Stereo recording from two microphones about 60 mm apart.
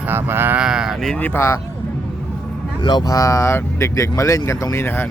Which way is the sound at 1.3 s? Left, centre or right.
Left.